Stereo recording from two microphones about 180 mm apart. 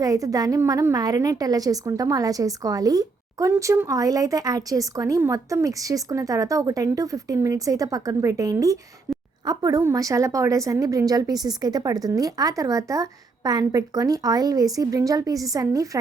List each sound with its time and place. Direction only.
0.0 s a woman's voice: 20° right (ahead or behind)